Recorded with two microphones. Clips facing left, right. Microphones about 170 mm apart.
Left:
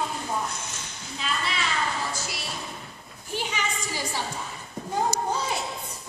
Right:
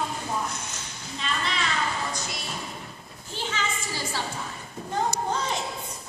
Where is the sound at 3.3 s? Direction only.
15° left (ahead or behind).